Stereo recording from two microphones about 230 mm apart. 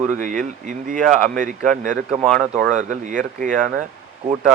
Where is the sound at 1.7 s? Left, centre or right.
Right.